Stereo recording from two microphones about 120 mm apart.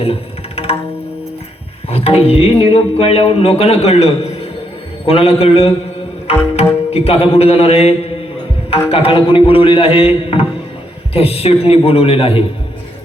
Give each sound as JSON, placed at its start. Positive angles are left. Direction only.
{"t": 0.0, "sound": "tabla", "side_deg": 55}
{"t": 1.9, "sound": "music", "side_deg": 55}
{"t": 6.9, "sound": "music", "side_deg": 55}
{"t": 8.7, "sound": "a man's voice", "side_deg": 55}
{"t": 11.1, "sound": "music", "side_deg": 55}